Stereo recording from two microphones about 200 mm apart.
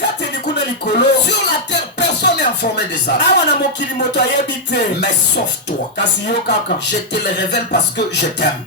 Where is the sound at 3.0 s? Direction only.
60° left (ahead or behind).